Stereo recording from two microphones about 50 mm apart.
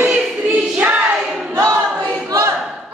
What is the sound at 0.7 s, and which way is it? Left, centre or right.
Music, right.